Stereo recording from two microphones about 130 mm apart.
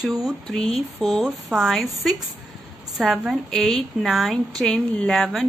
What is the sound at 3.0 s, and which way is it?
A woman's voice, centre (ahead or behind).